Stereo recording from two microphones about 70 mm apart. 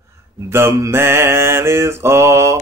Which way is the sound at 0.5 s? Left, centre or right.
Right.